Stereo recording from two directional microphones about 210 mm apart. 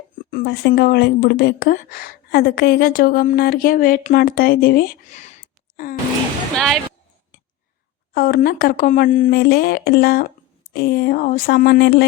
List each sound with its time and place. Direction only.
0.3 s speech: 45° left (ahead or behind)
8.1 s speech: 45° left (ahead or behind)